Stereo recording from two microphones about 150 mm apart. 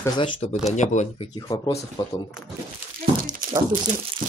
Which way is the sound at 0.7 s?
50° left (ahead or behind).